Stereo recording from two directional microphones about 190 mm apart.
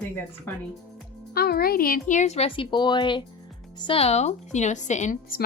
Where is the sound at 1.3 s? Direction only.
55° left (ahead or behind).